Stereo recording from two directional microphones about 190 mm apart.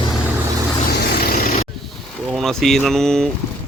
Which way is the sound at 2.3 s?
Centre (ahead or behind).